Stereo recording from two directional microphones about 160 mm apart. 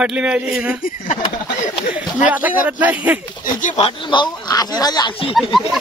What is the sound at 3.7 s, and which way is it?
Speech, 35° left (ahead or behind).